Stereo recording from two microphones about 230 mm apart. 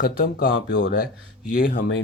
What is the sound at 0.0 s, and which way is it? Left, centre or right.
Speech, left.